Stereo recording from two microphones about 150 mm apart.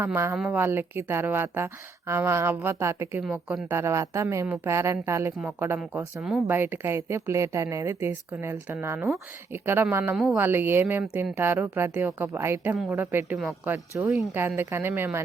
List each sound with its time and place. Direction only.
0.0 s a woman's voice: 15° right (ahead or behind)